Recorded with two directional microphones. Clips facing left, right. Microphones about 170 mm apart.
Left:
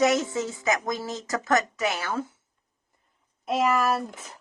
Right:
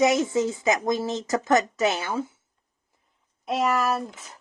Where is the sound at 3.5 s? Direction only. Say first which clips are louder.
Even; centre (ahead or behind).